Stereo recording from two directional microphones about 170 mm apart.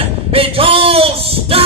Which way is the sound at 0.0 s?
35° right (ahead or behind).